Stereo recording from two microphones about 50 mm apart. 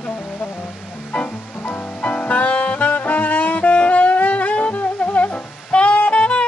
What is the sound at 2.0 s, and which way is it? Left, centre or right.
Saxophone, left.